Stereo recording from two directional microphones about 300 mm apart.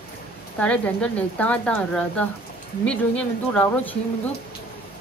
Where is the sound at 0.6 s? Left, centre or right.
Centre.